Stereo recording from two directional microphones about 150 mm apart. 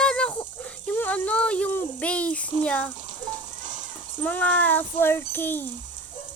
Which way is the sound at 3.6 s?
55° right (ahead or behind).